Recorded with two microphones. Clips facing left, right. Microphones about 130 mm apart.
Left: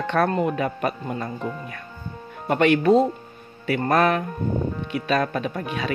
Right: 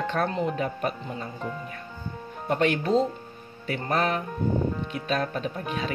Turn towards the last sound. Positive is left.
turn(degrees=85)